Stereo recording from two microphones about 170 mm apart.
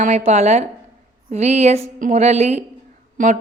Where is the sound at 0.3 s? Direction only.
40° right (ahead or behind).